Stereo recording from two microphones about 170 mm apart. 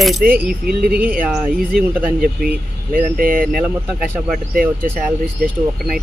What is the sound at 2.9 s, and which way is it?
Speech, 55° right (ahead or behind).